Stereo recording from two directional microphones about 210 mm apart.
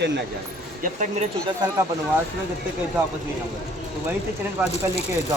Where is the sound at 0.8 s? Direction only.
35° right (ahead or behind).